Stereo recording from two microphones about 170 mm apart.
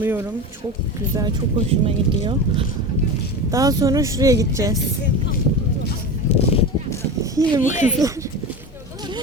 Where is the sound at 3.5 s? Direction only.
20° right (ahead or behind).